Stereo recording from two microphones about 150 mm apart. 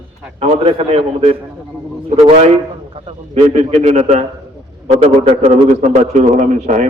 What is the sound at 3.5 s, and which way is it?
Speech, 50° right (ahead or behind).